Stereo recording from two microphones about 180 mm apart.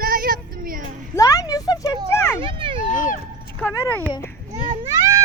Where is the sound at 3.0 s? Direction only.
45° left (ahead or behind).